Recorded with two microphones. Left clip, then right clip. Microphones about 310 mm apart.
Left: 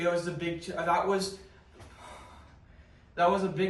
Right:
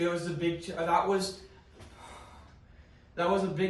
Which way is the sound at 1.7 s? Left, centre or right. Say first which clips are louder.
Left 2 dB; centre.